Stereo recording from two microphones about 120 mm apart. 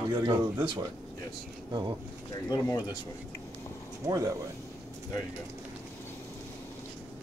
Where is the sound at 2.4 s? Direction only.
30° left (ahead or behind).